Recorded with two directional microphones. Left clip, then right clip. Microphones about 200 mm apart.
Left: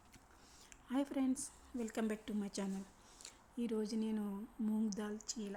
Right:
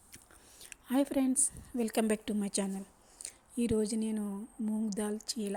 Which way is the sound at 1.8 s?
30° right (ahead or behind).